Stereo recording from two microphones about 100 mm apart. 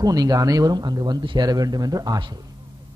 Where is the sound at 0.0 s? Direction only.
40° right (ahead or behind).